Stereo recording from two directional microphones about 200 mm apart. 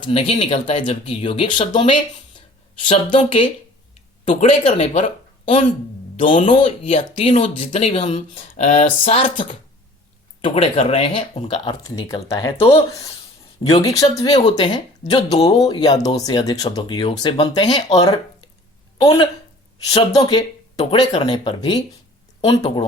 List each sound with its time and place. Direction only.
0.0 s speech: 25° left (ahead or behind)
6.2 s speech: 40° left (ahead or behind)
6.5 s speech: 30° left (ahead or behind)
8.8 s speech: 30° left (ahead or behind)
10.4 s speech: 30° left (ahead or behind)
12.3 s speech: 15° left (ahead or behind)
12.5 s speech: 30° left (ahead or behind)
13.8 s speech: 20° left (ahead or behind)
15.3 s speech: 30° left (ahead or behind)
15.8 s speech: 20° left (ahead or behind)
19.0 s speech: 25° left (ahead or behind)